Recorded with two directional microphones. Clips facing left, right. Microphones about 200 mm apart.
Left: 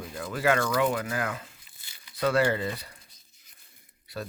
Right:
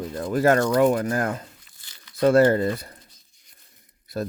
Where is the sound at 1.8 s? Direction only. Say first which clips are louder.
Right 2 dB; 10° left (ahead or behind).